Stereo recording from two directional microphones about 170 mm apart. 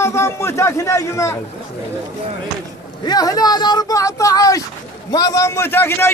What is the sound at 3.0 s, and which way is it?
Speech, 20° left (ahead or behind).